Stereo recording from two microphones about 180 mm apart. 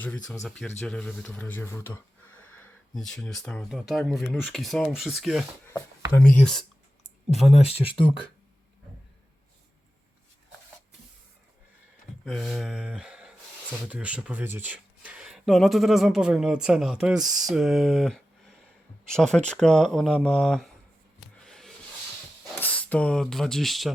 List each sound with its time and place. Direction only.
0.0 s speech: 10° left (ahead or behind)
2.6 s speech: centre (ahead or behind)
7.6 s speech: 35° left (ahead or behind)
12.2 s speech: centre (ahead or behind)
21.2 s a sound: centre (ahead or behind)
22.6 s speech: 10° left (ahead or behind)